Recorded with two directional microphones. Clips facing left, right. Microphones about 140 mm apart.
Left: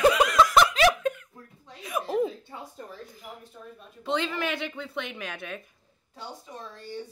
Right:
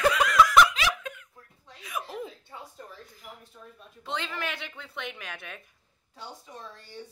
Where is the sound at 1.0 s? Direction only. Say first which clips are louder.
Left 12 dB; 40° left (ahead or behind).